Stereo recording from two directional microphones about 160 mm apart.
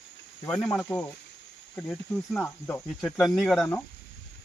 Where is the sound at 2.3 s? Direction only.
15° left (ahead or behind).